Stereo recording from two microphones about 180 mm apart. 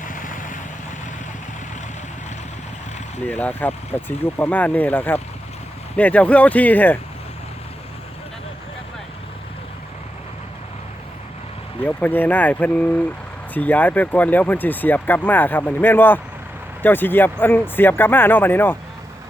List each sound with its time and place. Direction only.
0.0 s vehicle: 45° left (ahead or behind)
3.2 s speech: 10° left (ahead or behind)
11.9 s speech: 10° left (ahead or behind)